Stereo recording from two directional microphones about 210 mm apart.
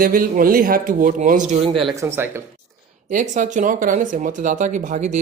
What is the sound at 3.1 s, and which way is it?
Speech, 35° right (ahead or behind).